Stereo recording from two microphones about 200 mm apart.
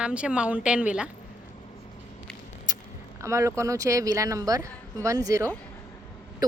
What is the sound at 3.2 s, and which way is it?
Speech, 15° right (ahead or behind).